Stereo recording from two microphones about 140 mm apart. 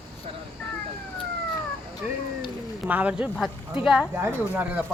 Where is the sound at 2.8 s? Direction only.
10° right (ahead or behind).